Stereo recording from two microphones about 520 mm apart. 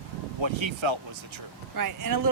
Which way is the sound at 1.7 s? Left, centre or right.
Right.